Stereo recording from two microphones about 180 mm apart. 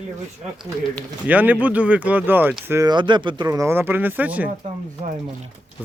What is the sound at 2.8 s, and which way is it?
Speech, 25° right (ahead or behind).